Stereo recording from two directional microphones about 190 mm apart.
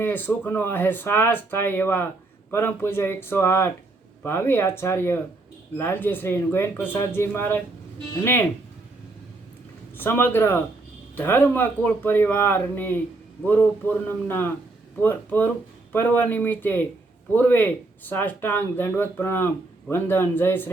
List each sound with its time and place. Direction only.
0.0 s speech: 10° left (ahead or behind)
10.0 s speech: 10° left (ahead or behind)